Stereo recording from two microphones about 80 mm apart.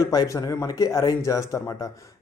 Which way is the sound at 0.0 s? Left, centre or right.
Left.